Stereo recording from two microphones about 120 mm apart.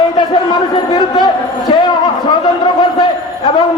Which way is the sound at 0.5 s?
40° left (ahead or behind).